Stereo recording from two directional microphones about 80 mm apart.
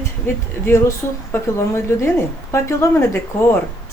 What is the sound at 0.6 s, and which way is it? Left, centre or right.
Speech, left.